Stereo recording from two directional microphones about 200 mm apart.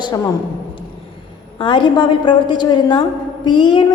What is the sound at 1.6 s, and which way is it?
A woman's voice, 25° left (ahead or behind).